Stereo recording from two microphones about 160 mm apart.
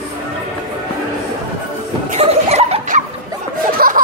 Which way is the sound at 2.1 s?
40° right (ahead or behind).